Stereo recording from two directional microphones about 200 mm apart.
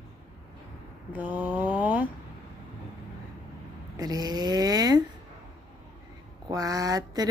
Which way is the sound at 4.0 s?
20° right (ahead or behind).